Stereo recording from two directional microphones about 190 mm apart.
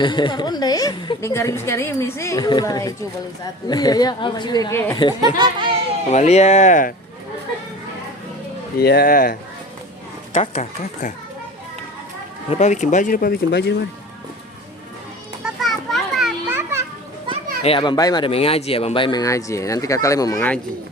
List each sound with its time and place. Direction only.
0.0 s speech: 25° left (ahead or behind)
5.2 s a child's voice: 25° right (ahead or behind)
6.1 s speech: 35° left (ahead or behind)
8.8 s speech: 55° left (ahead or behind)
10.3 s speech: 35° left (ahead or behind)
12.5 s speech: 35° left (ahead or behind); by 13.8 s 60° left (ahead or behind)
15.4 s children playing: centre (ahead or behind)
16.5 s children playing: 10° right (ahead or behind)
17.6 s speech: 30° left (ahead or behind)